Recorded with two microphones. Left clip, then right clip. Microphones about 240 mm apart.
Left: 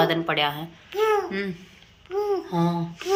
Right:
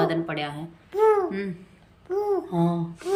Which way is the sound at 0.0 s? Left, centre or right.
Centre.